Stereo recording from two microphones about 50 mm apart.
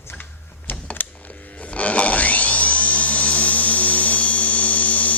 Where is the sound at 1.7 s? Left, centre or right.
Left.